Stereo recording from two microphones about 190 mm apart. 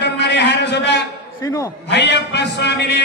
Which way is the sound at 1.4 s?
15° left (ahead or behind).